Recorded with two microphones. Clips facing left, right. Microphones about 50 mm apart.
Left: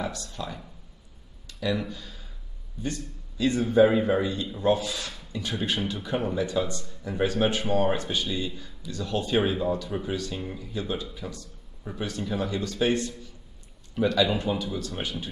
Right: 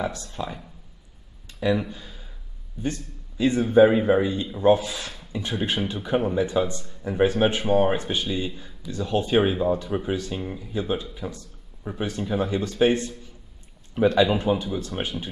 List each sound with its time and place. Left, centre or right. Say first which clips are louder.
0.0 s speech: right 4 dB; right